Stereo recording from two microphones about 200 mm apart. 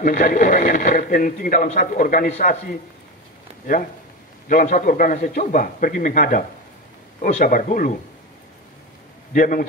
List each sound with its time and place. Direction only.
0.0 s speech: 40° left (ahead or behind)
4.5 s speech: 40° left (ahead or behind)
9.3 s a man's voice: 45° left (ahead or behind)